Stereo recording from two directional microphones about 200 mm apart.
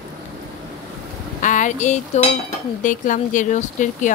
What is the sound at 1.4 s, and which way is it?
Cutlery, 40° left (ahead or behind).